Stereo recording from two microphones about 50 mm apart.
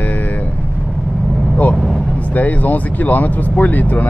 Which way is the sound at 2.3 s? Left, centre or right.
Left.